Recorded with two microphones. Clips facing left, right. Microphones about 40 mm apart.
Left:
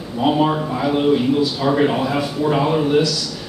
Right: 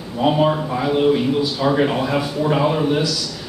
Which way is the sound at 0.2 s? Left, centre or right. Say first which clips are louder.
Even; centre.